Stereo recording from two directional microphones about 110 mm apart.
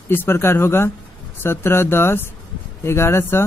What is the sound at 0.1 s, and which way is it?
Speech, 20° left (ahead or behind).